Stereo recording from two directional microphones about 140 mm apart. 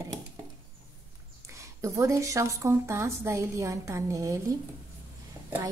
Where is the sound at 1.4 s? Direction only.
20° right (ahead or behind).